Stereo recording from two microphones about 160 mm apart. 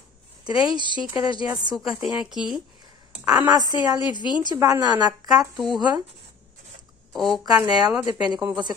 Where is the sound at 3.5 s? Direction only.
25° right (ahead or behind).